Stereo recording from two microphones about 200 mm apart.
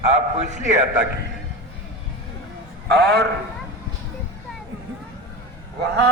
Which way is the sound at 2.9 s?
50° right (ahead or behind).